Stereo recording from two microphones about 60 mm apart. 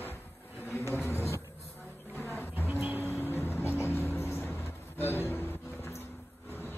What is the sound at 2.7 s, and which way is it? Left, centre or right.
Vehicle, right.